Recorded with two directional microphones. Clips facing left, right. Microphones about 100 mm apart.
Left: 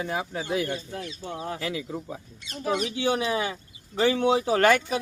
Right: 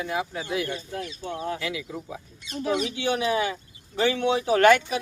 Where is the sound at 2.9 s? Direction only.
30° left (ahead or behind).